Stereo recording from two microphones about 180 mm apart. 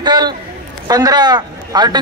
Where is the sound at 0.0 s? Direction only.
25° right (ahead or behind).